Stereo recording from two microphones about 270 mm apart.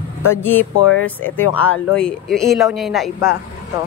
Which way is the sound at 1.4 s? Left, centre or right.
Left.